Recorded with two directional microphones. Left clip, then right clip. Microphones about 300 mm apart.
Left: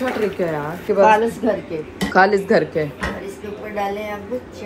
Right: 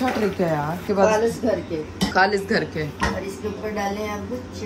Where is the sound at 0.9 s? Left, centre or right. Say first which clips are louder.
Left 5 dB; centre.